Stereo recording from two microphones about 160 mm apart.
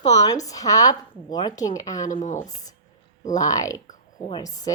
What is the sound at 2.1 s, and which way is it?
Speech, 50° left (ahead or behind).